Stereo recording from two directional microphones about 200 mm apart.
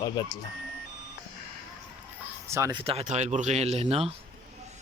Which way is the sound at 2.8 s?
30° right (ahead or behind).